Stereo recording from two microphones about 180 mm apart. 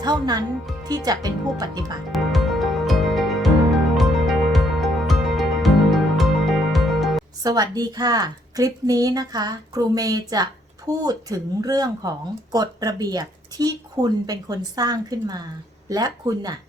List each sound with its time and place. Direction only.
0.0 s a woman's voice: 20° right (ahead or behind)
2.1 s music: centre (ahead or behind)
7.4 s a woman's voice: 20° right (ahead or behind)